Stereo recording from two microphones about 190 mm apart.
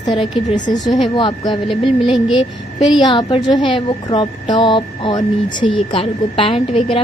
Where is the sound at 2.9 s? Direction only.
25° left (ahead or behind).